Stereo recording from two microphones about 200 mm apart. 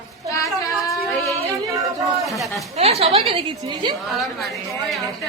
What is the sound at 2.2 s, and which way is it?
Speech, centre (ahead or behind).